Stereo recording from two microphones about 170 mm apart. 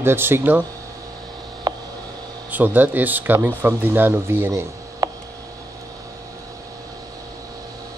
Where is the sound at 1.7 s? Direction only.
25° right (ahead or behind).